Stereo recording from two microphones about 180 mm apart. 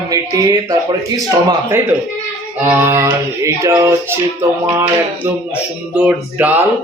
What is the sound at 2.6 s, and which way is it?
A man's voice, 10° right (ahead or behind).